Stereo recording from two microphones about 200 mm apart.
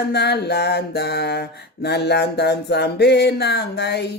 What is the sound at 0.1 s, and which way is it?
Mantra, 55° left (ahead or behind).